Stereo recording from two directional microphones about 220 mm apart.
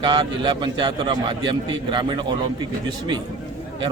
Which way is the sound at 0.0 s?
20° right (ahead or behind).